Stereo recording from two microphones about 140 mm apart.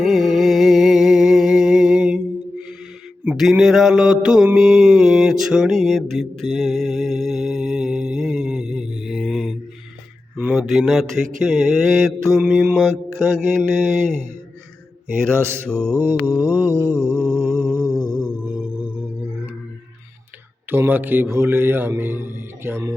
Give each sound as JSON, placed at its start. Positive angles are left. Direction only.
{"t": 0.0, "sound": "music", "side_deg": 0}
{"t": 3.2, "sound": "mantra", "side_deg": -5}
{"t": 15.6, "sound": "mantra", "side_deg": 5}
{"t": 15.9, "sound": "a man's voice", "side_deg": -15}
{"t": 16.9, "sound": "mantra", "side_deg": 0}
{"t": 17.3, "sound": "music", "side_deg": -20}
{"t": 18.1, "sound": "music", "side_deg": -5}
{"t": 20.7, "sound": "a man's voice", "side_deg": -15}